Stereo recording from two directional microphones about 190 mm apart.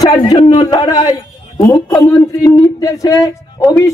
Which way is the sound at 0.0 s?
20° left (ahead or behind).